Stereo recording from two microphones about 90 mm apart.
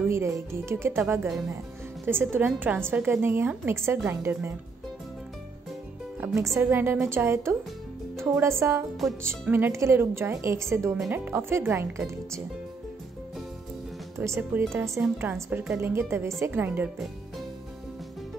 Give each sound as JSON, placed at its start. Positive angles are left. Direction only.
{"t": 0.1, "sound": "a woman's voice", "side_deg": -30}
{"t": 6.2, "sound": "a woman's voice", "side_deg": -35}
{"t": 14.1, "sound": "a woman's voice", "side_deg": -30}